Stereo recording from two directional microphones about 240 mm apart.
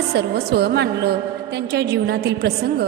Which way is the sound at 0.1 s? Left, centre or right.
Right.